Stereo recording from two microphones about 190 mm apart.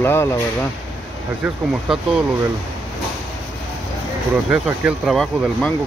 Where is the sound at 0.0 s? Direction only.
15° left (ahead or behind).